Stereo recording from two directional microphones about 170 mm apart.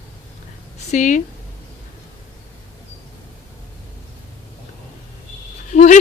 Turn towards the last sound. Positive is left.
turn(degrees=45)  # may be behind; listen again after turning